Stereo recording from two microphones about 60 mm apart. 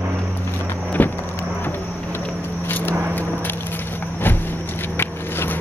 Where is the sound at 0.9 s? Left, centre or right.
Left.